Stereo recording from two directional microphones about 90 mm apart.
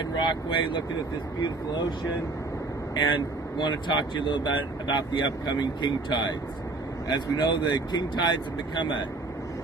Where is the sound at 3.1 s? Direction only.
60° left (ahead or behind).